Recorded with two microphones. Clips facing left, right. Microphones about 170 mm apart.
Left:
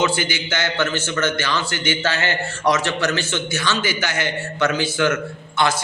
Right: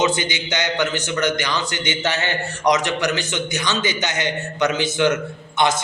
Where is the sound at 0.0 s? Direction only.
20° right (ahead or behind).